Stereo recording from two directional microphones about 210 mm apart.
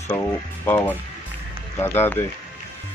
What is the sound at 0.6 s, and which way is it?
Speech, 10° left (ahead or behind).